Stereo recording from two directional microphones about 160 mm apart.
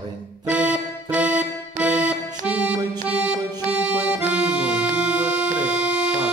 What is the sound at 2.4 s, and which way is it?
Accordion, 5° right (ahead or behind).